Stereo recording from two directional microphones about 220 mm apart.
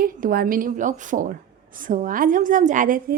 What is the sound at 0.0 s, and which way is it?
A woman's voice, 40° right (ahead or behind).